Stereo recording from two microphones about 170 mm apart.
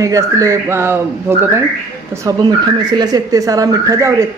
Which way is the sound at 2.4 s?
25° right (ahead or behind).